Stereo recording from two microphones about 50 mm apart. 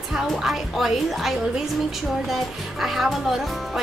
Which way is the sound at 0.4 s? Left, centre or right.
Centre.